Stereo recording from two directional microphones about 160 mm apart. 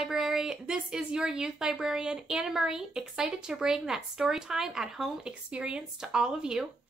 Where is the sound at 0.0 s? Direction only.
5° right (ahead or behind).